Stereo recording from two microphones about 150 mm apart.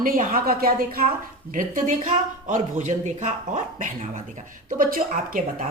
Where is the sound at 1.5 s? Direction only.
60° right (ahead or behind).